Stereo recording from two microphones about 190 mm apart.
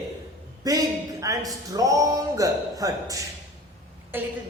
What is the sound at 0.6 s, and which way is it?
Speech, 20° right (ahead or behind).